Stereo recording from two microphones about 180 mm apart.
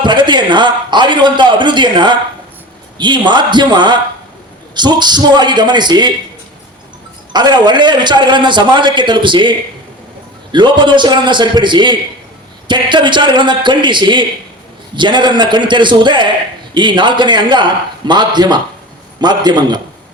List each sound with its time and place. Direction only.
0.0 s a man's voice: 25° right (ahead or behind)
7.3 s a man's voice: 25° right (ahead or behind)